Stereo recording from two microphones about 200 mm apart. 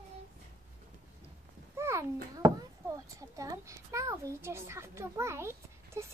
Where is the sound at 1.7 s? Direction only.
15° right (ahead or behind).